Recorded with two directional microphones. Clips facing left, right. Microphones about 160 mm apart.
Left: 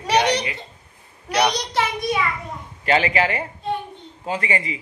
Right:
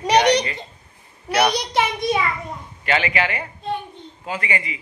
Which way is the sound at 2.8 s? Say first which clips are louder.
Left 3 dB; 35° left (ahead or behind).